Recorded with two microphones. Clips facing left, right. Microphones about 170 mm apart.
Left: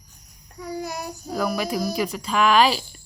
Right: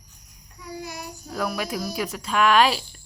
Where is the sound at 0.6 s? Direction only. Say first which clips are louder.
Left 5 dB; 45° left (ahead or behind).